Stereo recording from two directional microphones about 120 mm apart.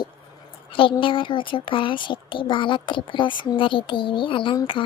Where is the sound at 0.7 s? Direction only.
45° left (ahead or behind).